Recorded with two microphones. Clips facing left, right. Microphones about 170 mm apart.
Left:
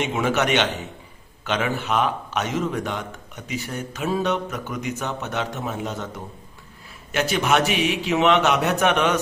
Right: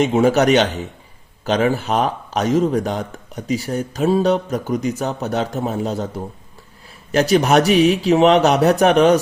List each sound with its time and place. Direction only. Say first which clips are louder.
0.0 s speech: right 8 dB; 35° right (ahead or behind)